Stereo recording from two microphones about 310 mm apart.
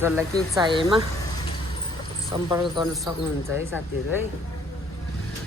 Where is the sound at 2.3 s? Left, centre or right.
Centre.